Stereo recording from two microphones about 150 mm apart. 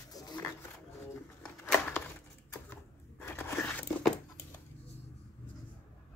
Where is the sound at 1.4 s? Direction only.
10° left (ahead or behind).